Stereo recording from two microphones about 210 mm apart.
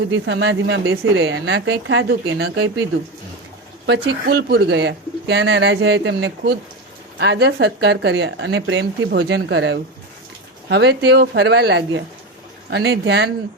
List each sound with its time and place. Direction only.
0.1 s speech: 55° right (ahead or behind)
3.8 s speech: 50° right (ahead or behind)